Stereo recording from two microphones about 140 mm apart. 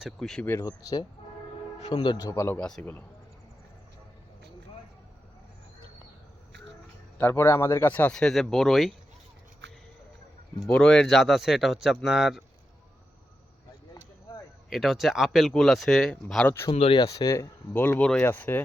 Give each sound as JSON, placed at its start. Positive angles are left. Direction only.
{"t": 0.0, "sound": "speech", "side_deg": 5}
{"t": 0.4, "sound": "speech", "side_deg": 20}
{"t": 2.3, "sound": "speech", "side_deg": 20}
{"t": 2.6, "sound": "speech", "side_deg": 5}
{"t": 7.2, "sound": "speech", "side_deg": 15}
{"t": 10.7, "sound": "speech", "side_deg": 5}
{"t": 14.7, "sound": "speech", "side_deg": 0}
{"t": 16.7, "sound": "speech", "side_deg": 45}
{"t": 17.0, "sound": "speech", "side_deg": 25}